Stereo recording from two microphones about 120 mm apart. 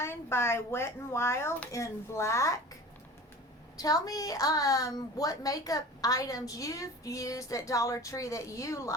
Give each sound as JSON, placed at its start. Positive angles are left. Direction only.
{"t": 0.0, "sound": "a woman's voice", "side_deg": 20}
{"t": 3.8, "sound": "a woman's voice", "side_deg": 30}